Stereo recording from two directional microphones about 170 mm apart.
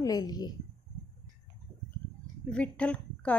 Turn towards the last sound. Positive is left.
turn(degrees=10)  # may be behind; listen again after turning